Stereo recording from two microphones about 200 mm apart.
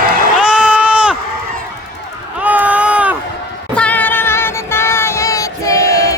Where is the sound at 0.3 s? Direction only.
5° right (ahead or behind).